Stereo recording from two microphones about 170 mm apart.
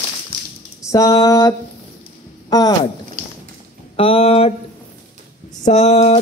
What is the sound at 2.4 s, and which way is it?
Speech, 25° left (ahead or behind).